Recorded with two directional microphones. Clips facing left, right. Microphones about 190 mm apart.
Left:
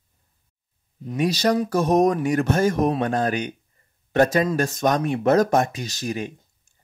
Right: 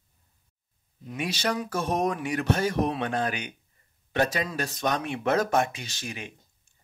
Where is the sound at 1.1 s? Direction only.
40° left (ahead or behind).